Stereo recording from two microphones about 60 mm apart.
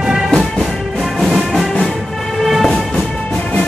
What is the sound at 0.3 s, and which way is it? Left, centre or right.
Music, centre.